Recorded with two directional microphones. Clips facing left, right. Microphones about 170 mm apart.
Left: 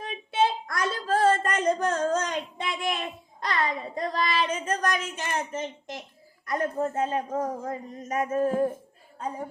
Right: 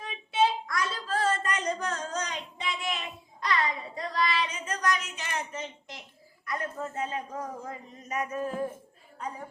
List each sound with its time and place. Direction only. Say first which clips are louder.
0.0 s child singing: left 1 dB; 50° left (ahead or behind)
6.4 s speech: left 7 dB; 40° left (ahead or behind)